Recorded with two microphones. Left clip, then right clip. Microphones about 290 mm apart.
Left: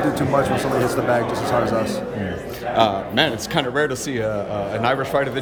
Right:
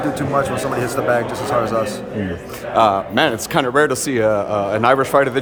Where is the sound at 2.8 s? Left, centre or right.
Centre.